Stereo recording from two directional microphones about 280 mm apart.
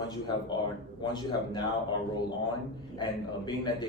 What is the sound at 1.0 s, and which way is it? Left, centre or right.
Speech, centre.